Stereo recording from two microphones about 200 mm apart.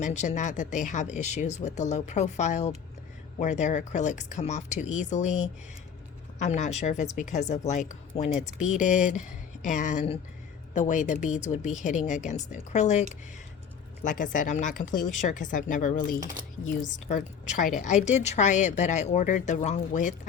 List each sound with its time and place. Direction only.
0.0 s a woman's voice: 35° left (ahead or behind)
8.4 s speech: 5° right (ahead or behind)
8.7 s a woman's voice: 40° left (ahead or behind)